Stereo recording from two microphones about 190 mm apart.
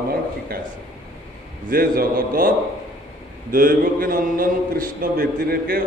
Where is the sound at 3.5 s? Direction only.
45° right (ahead or behind).